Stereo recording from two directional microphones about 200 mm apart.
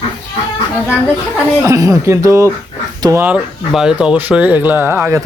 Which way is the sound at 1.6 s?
15° right (ahead or behind).